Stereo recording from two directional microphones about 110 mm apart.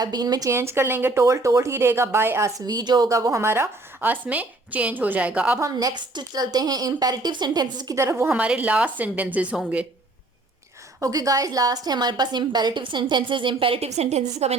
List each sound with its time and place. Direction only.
0.0 s speech: 40° right (ahead or behind); by 2.5 s 20° right (ahead or behind)
2.6 s a woman's voice: 35° right (ahead or behind)
3.1 s speech: 30° right (ahead or behind); by 5.5 s 10° right (ahead or behind)
5.5 s a woman's voice: 30° right (ahead or behind)
7.9 s speech: 25° right (ahead or behind)
8.3 s speech: 10° right (ahead or behind)
11.0 s a woman's voice: 30° right (ahead or behind); by 14.6 s 85° right